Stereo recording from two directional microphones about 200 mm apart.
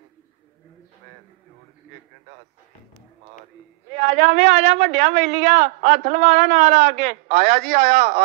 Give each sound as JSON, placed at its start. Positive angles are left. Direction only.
{"t": 3.9, "sound": "a man's voice", "side_deg": -35}